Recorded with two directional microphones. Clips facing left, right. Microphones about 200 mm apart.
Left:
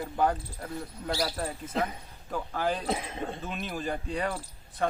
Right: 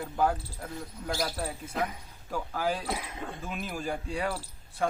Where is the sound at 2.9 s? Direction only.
25° left (ahead or behind).